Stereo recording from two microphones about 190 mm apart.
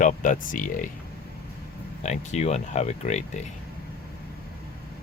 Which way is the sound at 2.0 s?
35° left (ahead or behind).